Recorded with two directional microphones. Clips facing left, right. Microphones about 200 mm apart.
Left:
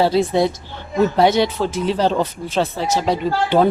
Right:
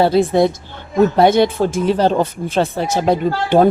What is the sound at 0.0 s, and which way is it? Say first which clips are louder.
Speech: right 3 dB; 55° right (ahead or behind).